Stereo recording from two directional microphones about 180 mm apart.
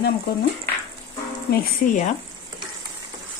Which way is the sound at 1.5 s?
45° left (ahead or behind).